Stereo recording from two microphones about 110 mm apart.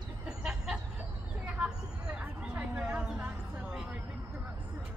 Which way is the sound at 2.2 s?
15° right (ahead or behind).